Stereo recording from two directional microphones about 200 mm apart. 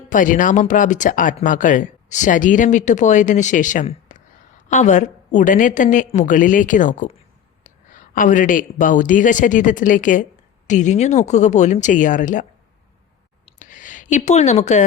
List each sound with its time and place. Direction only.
0.1 s speech: 40° left (ahead or behind)
13.4 s clicking: 40° left (ahead or behind)